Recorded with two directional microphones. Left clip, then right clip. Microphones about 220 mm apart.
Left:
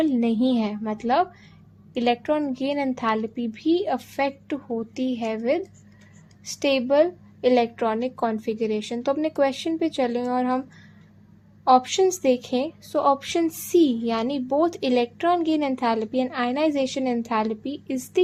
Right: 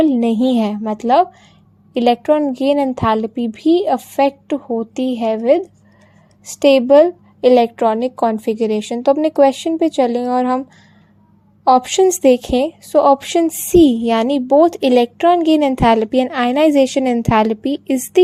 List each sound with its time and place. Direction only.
0.0 s a woman's voice: 35° right (ahead or behind)
11.6 s a woman's voice: 35° right (ahead or behind)